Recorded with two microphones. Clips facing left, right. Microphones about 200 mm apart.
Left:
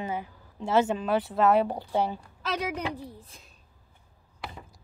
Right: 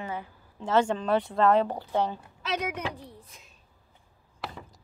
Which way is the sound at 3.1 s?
30° left (ahead or behind).